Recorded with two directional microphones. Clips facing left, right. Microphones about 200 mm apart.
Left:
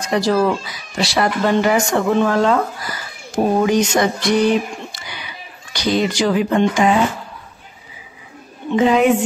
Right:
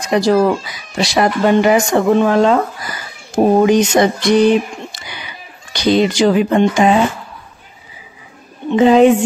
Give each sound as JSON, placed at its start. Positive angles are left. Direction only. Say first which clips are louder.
{"t": 0.1, "sound": "speech", "louder": "right 4 dB", "side_deg": -20}
{"t": 3.6, "sound": "speech", "louder": "right 4 dB", "side_deg": -20}
{"t": 8.7, "sound": "a woman's voice", "louder": "right 5 dB", "side_deg": -30}